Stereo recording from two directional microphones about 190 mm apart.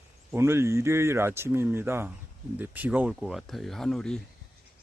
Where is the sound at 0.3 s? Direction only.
15° right (ahead or behind); by 4.2 s 5° left (ahead or behind).